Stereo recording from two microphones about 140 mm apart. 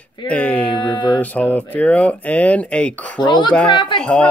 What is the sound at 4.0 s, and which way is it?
Speech, 5° left (ahead or behind).